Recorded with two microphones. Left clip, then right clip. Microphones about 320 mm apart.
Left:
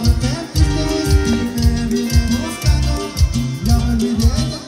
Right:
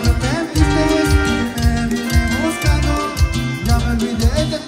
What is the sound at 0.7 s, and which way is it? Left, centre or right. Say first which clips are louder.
Music: right 4 dB; right.